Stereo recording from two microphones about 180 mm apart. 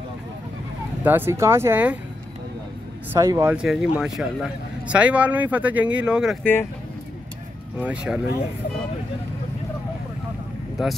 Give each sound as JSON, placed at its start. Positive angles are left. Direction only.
{"t": 1.0, "sound": "speech", "side_deg": -10}
{"t": 3.1, "sound": "speech", "side_deg": -15}
{"t": 3.5, "sound": "speech", "side_deg": -5}
{"t": 6.4, "sound": "speech", "side_deg": 10}
{"t": 7.8, "sound": "speech", "side_deg": -5}